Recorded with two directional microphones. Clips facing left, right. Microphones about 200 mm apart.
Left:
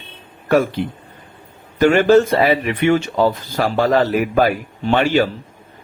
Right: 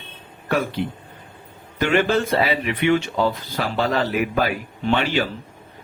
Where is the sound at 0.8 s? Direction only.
50° left (ahead or behind).